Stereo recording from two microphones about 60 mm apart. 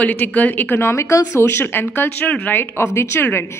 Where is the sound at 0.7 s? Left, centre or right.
Left.